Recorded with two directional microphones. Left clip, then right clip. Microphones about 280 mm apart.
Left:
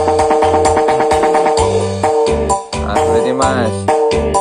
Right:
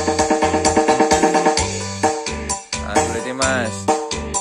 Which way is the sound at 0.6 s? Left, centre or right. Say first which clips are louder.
Left 4 dB; right.